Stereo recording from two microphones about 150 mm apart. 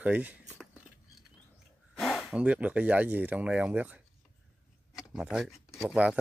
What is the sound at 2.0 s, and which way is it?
Speech, centre (ahead or behind).